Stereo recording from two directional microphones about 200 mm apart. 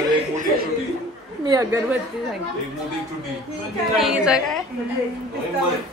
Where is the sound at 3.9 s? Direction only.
5° right (ahead or behind).